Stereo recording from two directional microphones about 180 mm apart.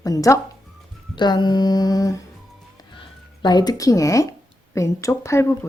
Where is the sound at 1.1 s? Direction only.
25° left (ahead or behind).